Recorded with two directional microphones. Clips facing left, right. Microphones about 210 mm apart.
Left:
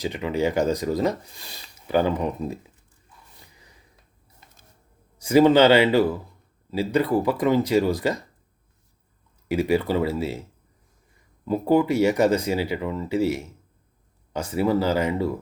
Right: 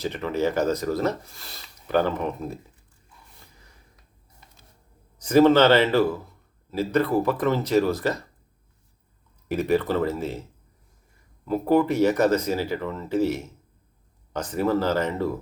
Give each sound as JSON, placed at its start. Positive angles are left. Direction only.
{"t": 0.0, "sound": "speech", "side_deg": 15}
{"t": 5.2, "sound": "speech", "side_deg": 10}
{"t": 9.5, "sound": "speech", "side_deg": 10}
{"t": 11.4, "sound": "speech", "side_deg": 15}